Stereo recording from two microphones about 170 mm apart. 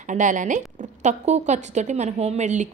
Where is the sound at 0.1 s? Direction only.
45° right (ahead or behind).